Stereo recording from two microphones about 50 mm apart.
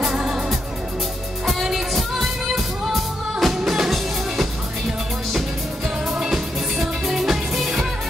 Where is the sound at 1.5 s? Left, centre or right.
Centre.